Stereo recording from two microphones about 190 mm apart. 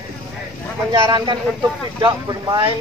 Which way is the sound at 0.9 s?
25° right (ahead or behind).